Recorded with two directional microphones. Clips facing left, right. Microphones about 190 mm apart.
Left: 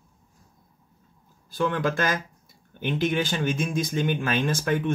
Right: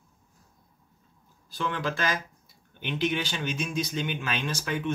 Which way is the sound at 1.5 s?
50° left (ahead or behind).